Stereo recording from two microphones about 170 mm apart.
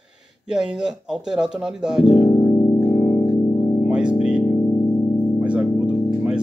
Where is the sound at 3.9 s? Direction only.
5° right (ahead or behind).